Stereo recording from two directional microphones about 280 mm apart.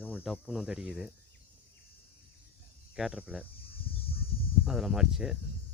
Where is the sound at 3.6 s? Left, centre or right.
Centre.